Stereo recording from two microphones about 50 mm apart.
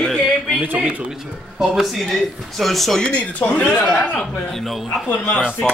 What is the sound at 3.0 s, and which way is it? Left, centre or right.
Speech, left.